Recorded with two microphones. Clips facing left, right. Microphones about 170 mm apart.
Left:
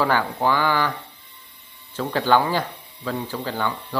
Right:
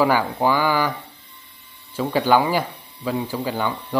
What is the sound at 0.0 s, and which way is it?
Speech, 10° right (ahead or behind).